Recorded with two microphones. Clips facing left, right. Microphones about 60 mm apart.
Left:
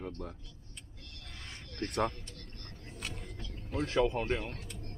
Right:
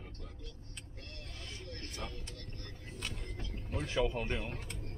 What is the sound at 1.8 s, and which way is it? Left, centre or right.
Speech, left.